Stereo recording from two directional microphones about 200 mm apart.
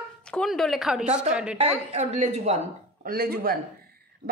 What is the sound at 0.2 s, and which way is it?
Speech, 5° left (ahead or behind).